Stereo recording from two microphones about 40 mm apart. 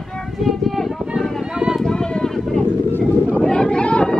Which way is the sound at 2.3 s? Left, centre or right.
Centre.